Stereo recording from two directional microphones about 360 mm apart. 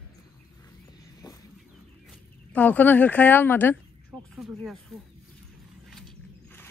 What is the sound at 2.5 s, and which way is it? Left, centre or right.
Speech, centre.